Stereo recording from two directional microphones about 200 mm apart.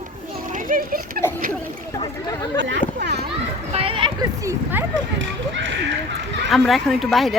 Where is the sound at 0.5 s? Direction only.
45° right (ahead or behind).